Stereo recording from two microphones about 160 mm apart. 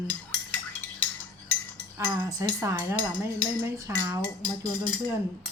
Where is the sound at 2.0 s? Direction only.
20° right (ahead or behind).